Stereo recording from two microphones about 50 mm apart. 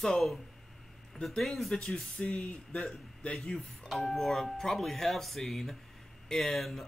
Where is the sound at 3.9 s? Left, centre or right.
Centre.